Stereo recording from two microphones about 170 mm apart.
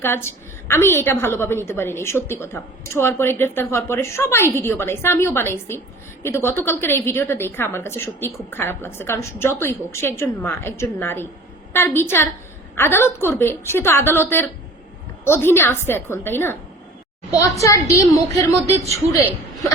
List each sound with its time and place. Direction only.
0.0 s a woman's voice: 15° left (ahead or behind)
17.6 s a woman's voice: 20° left (ahead or behind)
18.5 s speech: 40° right (ahead or behind)